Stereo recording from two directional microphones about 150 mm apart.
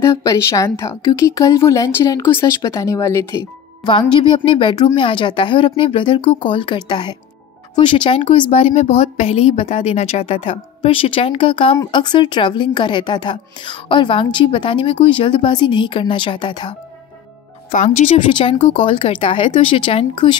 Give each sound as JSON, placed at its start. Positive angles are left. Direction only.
{"t": 0.0, "sound": "speech", "side_deg": 20}
{"t": 3.8, "sound": "a woman's voice", "side_deg": 30}
{"t": 17.6, "sound": "speech", "side_deg": 55}
{"t": 18.4, "sound": "a woman's voice", "side_deg": 40}